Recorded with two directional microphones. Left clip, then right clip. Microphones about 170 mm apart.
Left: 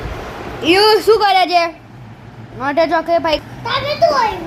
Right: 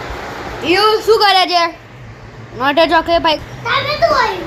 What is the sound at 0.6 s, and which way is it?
Speech, 40° left (ahead or behind).